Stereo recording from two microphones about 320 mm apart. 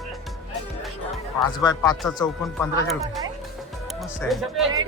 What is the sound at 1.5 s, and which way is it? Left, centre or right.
Speech, centre.